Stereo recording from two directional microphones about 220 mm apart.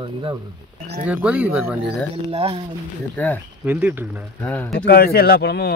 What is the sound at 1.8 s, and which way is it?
Speech, 25° right (ahead or behind).